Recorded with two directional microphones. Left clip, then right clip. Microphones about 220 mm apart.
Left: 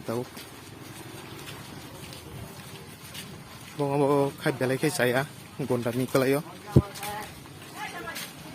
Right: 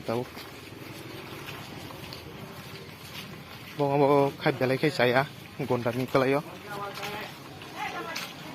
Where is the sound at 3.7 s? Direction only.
15° left (ahead or behind).